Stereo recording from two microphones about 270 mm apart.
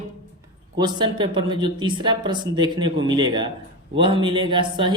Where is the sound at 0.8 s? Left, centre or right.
Centre.